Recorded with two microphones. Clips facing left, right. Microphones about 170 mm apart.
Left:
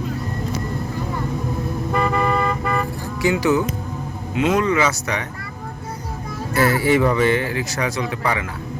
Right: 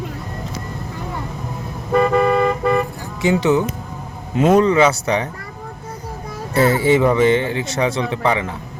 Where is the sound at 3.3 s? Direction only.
25° right (ahead or behind).